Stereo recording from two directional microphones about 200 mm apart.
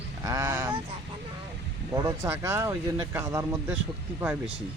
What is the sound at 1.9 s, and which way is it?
Speech, 15° right (ahead or behind).